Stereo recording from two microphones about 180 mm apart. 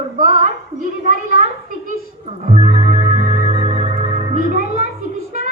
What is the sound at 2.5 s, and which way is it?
Music, 40° right (ahead or behind).